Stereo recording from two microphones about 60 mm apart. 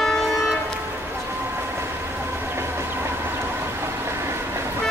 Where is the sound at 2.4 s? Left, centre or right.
Right.